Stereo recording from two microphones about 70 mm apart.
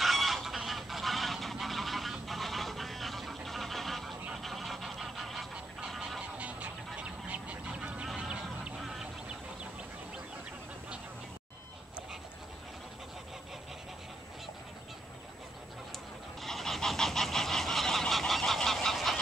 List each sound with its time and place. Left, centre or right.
0.0 s goose: centre
6.3 s goose: centre
8.2 s duck: centre
16.3 s goose: centre